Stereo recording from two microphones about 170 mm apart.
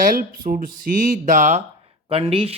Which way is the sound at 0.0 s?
55° right (ahead or behind).